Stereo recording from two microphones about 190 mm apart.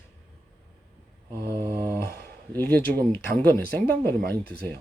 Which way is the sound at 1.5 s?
20° right (ahead or behind).